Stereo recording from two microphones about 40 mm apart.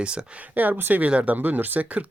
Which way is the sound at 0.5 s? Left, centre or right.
Right.